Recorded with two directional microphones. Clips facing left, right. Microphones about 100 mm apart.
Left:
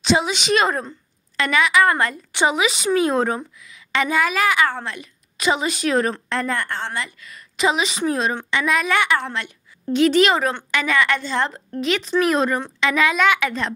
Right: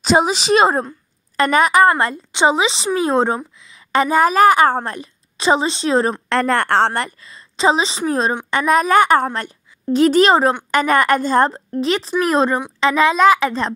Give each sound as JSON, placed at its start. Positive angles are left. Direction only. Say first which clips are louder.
{"t": 0.0, "sound": "a woman's voice", "louder": "right 4 dB", "side_deg": -40}
{"t": 3.9, "sound": "a woman's voice", "louder": "right 6 dB", "side_deg": -40}
{"t": 6.2, "sound": "a woman's voice", "louder": "right 7 dB", "side_deg": -70}
{"t": 7.2, "sound": "a woman's voice", "louder": "right 1 dB", "side_deg": -30}